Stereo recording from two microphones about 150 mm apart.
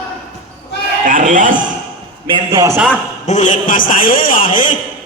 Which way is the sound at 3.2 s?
55° left (ahead or behind).